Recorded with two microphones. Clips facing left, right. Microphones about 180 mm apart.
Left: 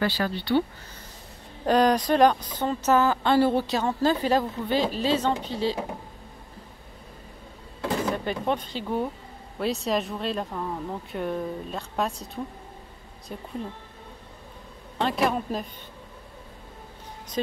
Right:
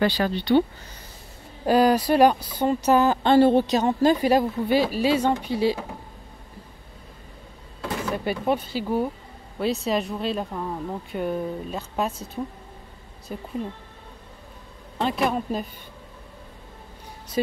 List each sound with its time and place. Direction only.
0.0 s speech: 20° right (ahead or behind)
1.7 s speech: 5° right (ahead or behind)
8.1 s speech: 10° right (ahead or behind)
15.0 s speech: centre (ahead or behind)